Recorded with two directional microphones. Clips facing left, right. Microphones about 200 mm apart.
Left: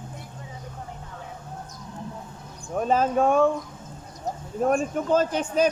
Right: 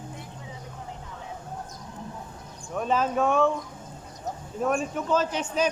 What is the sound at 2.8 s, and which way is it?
Speech, 40° left (ahead or behind).